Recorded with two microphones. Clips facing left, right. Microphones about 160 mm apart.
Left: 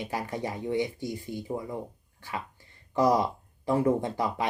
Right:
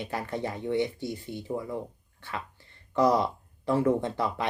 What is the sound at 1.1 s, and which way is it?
Speech, 25° right (ahead or behind).